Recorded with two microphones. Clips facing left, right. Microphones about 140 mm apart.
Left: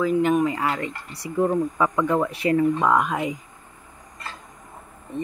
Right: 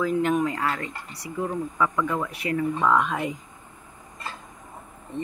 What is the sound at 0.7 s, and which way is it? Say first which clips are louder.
Speech: left 4 dB; 30° left (ahead or behind).